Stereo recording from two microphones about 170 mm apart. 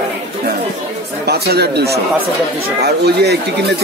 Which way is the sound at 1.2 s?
75° right (ahead or behind).